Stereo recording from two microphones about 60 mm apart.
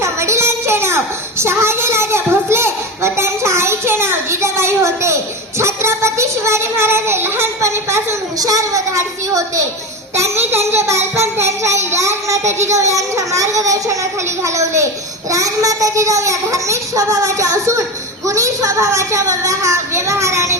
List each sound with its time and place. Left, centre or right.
0.0 s a sound: right
8.4 s a woman's voice: right
10.2 s a child's voice: right
15.3 s a child's voice: right